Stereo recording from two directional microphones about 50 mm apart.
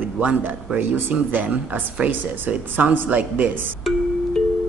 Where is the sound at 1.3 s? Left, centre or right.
Right.